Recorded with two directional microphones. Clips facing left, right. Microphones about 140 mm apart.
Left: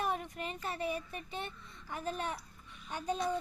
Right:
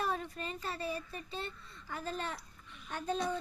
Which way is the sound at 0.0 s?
15° left (ahead or behind).